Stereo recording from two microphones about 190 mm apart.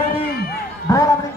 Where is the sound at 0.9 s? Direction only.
20° left (ahead or behind).